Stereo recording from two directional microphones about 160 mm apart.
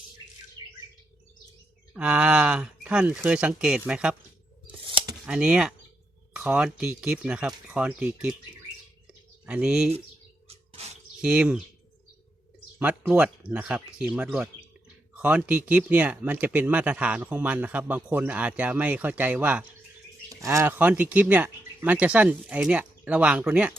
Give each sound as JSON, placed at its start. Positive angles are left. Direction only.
{"t": 1.9, "sound": "speech", "side_deg": -10}
{"t": 4.9, "sound": "scissors", "side_deg": -30}
{"t": 5.2, "sound": "speech", "side_deg": -5}
{"t": 9.5, "sound": "speech", "side_deg": -5}
{"t": 10.7, "sound": "a sound", "side_deg": -40}
{"t": 11.2, "sound": "speech", "side_deg": -5}
{"t": 12.8, "sound": "speech", "side_deg": -10}